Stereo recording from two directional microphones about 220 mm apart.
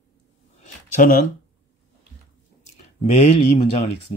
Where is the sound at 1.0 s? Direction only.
40° left (ahead or behind).